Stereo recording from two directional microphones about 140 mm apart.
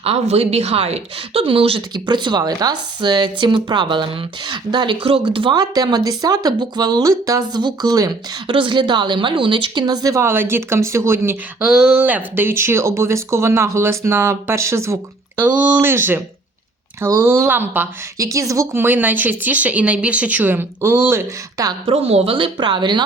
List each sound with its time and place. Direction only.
0.0 s speech: 45° right (ahead or behind); by 8.1 s 25° right (ahead or behind)
8.4 s speech: 40° right (ahead or behind); by 11.3 s 20° right (ahead or behind)
11.6 s speech: 5° right (ahead or behind); by 14.9 s 20° right (ahead or behind)
15.4 s speech: 10° right (ahead or behind)
21.8 s speech: 45° right (ahead or behind)